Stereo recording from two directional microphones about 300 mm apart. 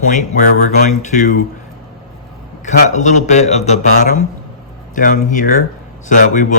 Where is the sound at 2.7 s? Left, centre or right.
Left.